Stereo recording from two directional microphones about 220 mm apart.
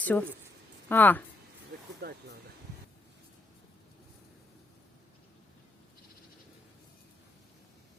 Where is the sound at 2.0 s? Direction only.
50° right (ahead or behind).